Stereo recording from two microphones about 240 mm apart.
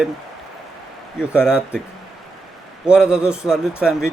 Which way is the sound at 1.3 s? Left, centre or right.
Centre.